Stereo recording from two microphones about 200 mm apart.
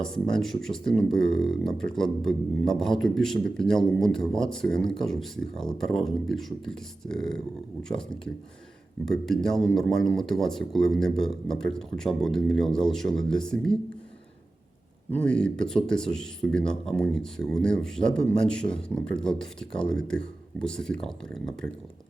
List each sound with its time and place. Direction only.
0.0 s speech: 5° left (ahead or behind)
15.1 s speech: 5° left (ahead or behind)